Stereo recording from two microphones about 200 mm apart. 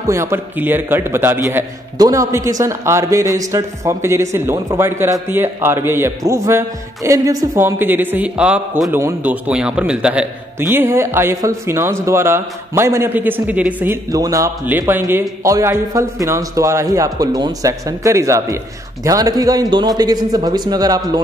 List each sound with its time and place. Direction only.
0.0 s a man's voice: 15° right (ahead or behind)